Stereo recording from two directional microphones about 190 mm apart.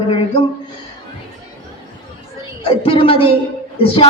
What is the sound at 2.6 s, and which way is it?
A woman's voice, 30° left (ahead or behind).